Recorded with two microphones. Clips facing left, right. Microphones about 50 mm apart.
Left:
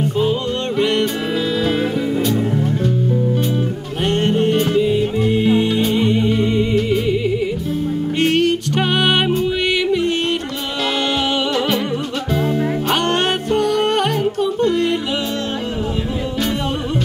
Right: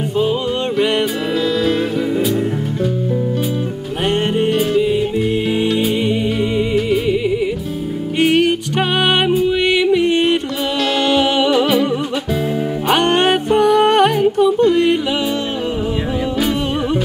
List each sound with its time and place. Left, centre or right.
0.2 s music: centre
4.0 s music: centre
4.5 s music: centre
9.8 s music: centre
11.1 s music: centre
12.9 s music: right
16.3 s music: centre